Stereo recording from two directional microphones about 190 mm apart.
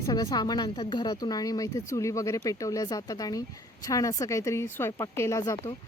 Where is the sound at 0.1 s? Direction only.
20° left (ahead or behind).